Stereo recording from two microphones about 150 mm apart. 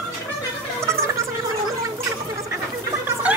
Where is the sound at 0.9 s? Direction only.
20° right (ahead or behind).